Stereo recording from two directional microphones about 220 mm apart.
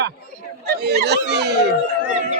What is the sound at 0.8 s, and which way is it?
Speech, 50° right (ahead or behind).